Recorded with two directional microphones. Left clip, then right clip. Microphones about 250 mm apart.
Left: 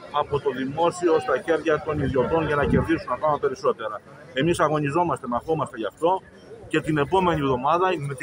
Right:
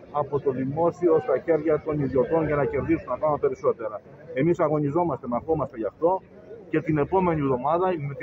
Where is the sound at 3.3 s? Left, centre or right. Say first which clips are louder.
Left 1 dB; centre.